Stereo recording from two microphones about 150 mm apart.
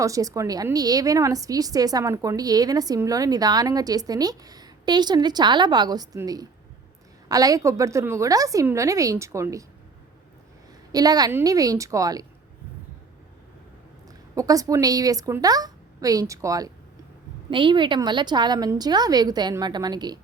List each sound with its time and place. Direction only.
0.0 s a woman's voice: 20° right (ahead or behind)
10.9 s a woman's voice: 25° right (ahead or behind)
14.3 s a woman's voice: 25° right (ahead or behind)